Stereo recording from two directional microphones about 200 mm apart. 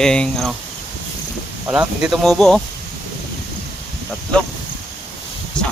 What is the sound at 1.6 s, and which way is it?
Speech, 5° right (ahead or behind).